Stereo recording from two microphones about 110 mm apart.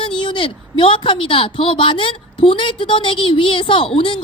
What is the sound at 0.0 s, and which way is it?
A woman's voice, 45° left (ahead or behind).